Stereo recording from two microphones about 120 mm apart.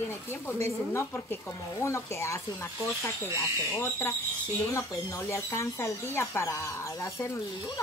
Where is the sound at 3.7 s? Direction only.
20° left (ahead or behind).